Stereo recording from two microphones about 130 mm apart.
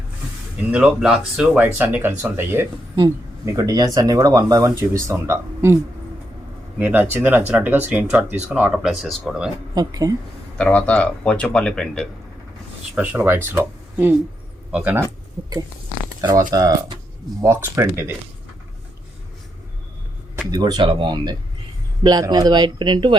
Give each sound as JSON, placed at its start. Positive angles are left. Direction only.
{"t": 0.7, "sound": "speech", "side_deg": -5}
{"t": 2.9, "sound": "speech", "side_deg": -30}
{"t": 9.7, "sound": "speech", "side_deg": -30}
{"t": 10.6, "sound": "speech", "side_deg": 10}
{"t": 13.0, "sound": "speech", "side_deg": -15}
{"t": 16.5, "sound": "speech", "side_deg": -30}
{"t": 17.4, "sound": "speech", "side_deg": -20}
{"t": 20.5, "sound": "speech", "side_deg": -35}